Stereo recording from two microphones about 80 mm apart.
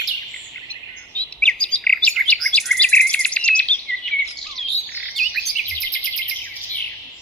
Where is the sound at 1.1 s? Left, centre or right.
Centre.